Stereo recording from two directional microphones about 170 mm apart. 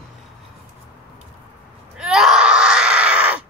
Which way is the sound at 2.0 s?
5° right (ahead or behind).